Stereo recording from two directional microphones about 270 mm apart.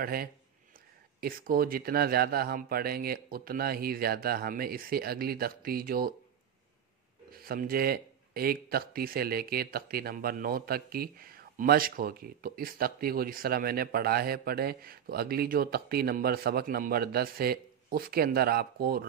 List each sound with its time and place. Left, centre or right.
0.0 s speech: right
7.2 s speech: right